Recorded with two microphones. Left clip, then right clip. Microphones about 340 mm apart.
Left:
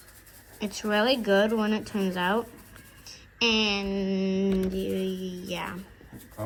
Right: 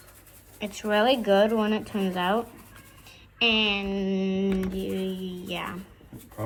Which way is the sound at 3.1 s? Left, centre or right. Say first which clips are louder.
Right 2 dB; centre.